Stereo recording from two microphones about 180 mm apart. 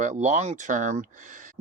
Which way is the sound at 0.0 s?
45° right (ahead or behind).